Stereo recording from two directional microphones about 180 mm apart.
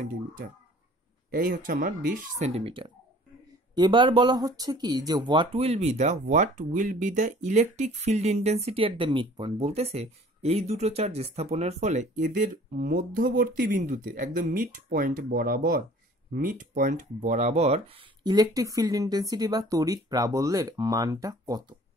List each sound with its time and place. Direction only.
0.0 s speech: 50° right (ahead or behind); by 21.7 s 20° right (ahead or behind)